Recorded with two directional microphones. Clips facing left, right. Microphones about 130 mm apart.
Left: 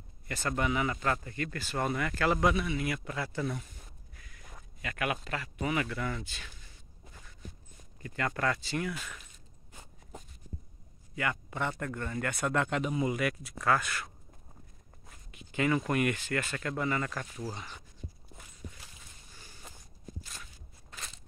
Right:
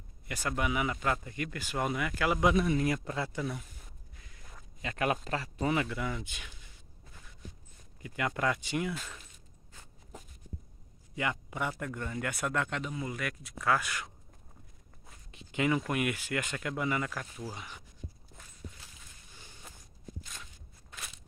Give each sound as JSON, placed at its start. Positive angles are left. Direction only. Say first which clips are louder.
{"t": 0.3, "sound": "speech", "louder": "left 1 dB", "side_deg": -10}
{"t": 2.5, "sound": "speech", "louder": "right 4 dB", "side_deg": -40}
{"t": 3.3, "sound": "speech", "louder": "left 2 dB", "side_deg": -5}
{"t": 4.8, "sound": "speech", "louder": "right 3 dB", "side_deg": -30}
{"t": 5.9, "sound": "speech", "louder": "even", "side_deg": -15}
{"t": 8.0, "sound": "speech", "louder": "even", "side_deg": -15}
{"t": 11.1, "sound": "speech", "louder": "even", "side_deg": -15}
{"t": 12.9, "sound": "speech", "louder": "left 7 dB", "side_deg": 15}
{"t": 13.2, "sound": "speech", "louder": "left 4 dB", "side_deg": 5}
{"t": 13.8, "sound": "speech", "louder": "left 1 dB", "side_deg": -15}
{"t": 15.5, "sound": "speech", "louder": "left 1 dB", "side_deg": -15}